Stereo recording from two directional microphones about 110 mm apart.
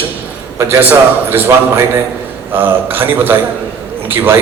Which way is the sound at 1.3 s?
15° right (ahead or behind).